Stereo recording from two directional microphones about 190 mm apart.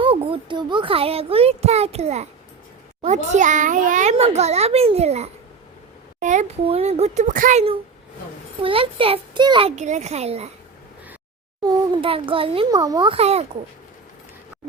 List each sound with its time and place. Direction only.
0.0 s a child's voice: 25° right (ahead or behind)
8.6 s a child's voice: 30° right (ahead or behind)
11.6 s a child's voice: 30° right (ahead or behind)